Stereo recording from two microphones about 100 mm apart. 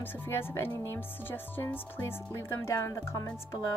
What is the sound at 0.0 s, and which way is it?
Speech, 25° left (ahead or behind).